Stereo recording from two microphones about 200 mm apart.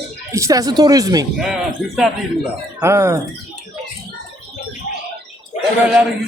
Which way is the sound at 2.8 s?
10° right (ahead or behind).